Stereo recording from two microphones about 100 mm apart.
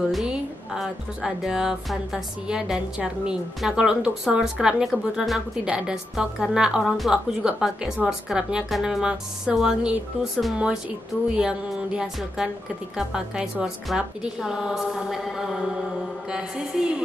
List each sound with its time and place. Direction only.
0.1 s speech: 5° right (ahead or behind)